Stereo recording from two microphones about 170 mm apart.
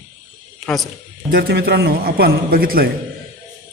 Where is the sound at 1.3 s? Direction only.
70° right (ahead or behind).